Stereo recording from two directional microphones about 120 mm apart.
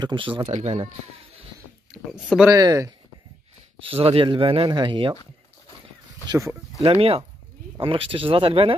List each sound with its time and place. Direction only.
0.0 s a man's voice: 45° right (ahead or behind)
0.5 s speech: 70° right (ahead or behind)
1.9 s speech: 5° right (ahead or behind)
2.5 s speech: 30° right (ahead or behind)
3.8 s a man's voice: 50° right (ahead or behind)
6.8 s a man's voice: 50° right (ahead or behind)